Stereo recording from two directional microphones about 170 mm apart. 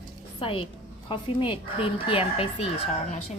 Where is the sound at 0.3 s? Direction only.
30° left (ahead or behind).